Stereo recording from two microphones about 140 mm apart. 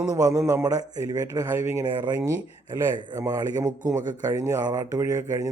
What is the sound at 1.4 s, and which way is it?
Speech, 15° right (ahead or behind).